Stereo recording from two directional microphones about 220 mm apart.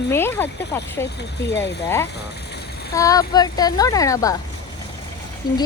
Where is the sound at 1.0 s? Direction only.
50° left (ahead or behind).